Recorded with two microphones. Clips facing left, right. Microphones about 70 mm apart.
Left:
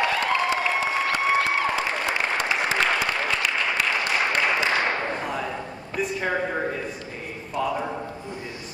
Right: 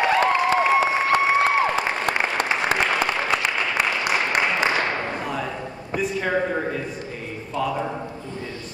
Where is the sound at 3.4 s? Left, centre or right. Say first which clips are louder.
Right 1 dB; right.